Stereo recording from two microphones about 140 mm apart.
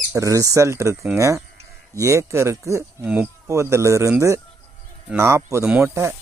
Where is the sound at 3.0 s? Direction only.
10° right (ahead or behind).